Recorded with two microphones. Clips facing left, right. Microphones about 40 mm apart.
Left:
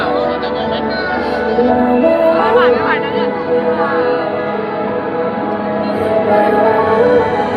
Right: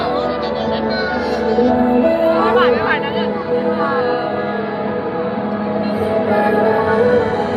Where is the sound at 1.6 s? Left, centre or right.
Centre.